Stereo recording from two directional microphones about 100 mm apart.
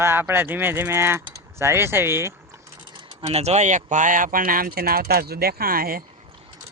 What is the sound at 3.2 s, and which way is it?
Speech, 90° right.